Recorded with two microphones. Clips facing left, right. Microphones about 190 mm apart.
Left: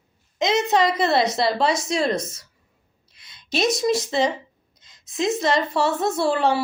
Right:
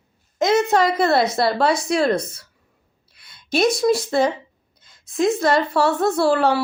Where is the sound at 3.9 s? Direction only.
55° right (ahead or behind).